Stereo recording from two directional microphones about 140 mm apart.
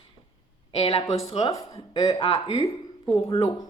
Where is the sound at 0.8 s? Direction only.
45° left (ahead or behind).